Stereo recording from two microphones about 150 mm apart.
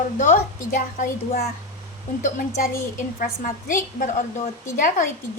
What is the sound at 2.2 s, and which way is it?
Speech, 55° left (ahead or behind).